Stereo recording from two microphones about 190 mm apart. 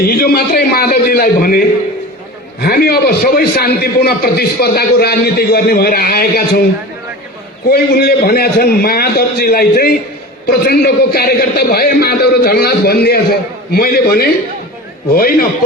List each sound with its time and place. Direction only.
0.1 s a man's voice: 50° left (ahead or behind)
2.6 s a man's voice: 55° left (ahead or behind)
7.7 s a man's voice: 55° left (ahead or behind)